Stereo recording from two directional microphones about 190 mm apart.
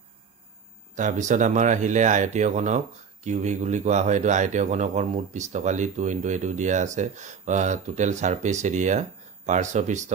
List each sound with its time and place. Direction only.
0.9 s speech: 40° right (ahead or behind)